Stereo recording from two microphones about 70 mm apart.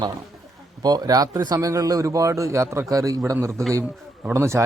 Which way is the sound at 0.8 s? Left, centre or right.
Right.